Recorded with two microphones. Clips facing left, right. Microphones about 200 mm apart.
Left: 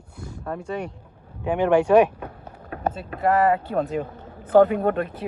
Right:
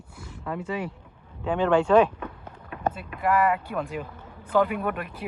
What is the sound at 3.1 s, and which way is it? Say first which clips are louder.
Speech: left 4 dB; 40° left (ahead or behind).